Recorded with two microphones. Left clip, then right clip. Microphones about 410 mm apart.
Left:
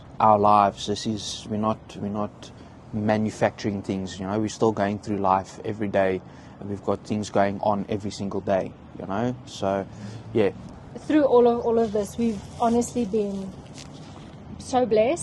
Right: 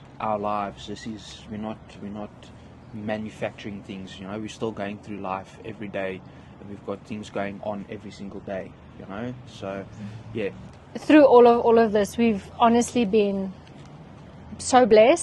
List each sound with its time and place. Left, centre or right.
0.2 s speech: left
1.6 s speech: left
10.9 s a woman's voice: right
14.6 s a woman's voice: right